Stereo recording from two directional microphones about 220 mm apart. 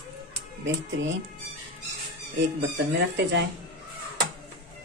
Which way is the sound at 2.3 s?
50° right (ahead or behind).